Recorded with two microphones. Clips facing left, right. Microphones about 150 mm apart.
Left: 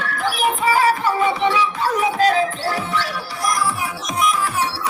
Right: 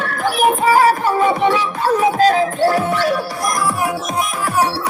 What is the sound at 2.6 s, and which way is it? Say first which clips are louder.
Music: right 8 dB; 50° right (ahead or behind).